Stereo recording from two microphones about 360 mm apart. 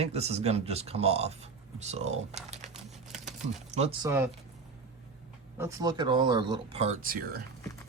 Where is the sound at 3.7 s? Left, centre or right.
Centre.